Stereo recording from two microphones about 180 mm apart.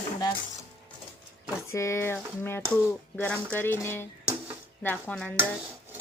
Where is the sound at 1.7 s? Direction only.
15° left (ahead or behind).